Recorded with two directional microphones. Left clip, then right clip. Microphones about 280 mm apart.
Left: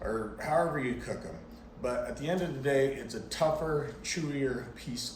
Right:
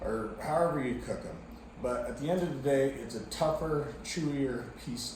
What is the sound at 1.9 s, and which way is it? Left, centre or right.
Speech, centre.